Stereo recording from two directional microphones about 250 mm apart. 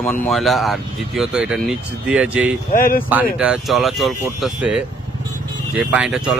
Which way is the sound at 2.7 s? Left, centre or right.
Left.